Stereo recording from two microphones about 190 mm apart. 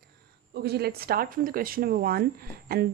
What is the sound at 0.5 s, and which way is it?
Speech, 55° right (ahead or behind).